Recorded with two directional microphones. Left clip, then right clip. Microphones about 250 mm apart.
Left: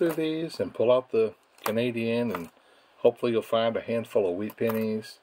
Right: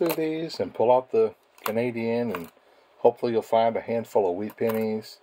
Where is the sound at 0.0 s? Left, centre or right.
Centre.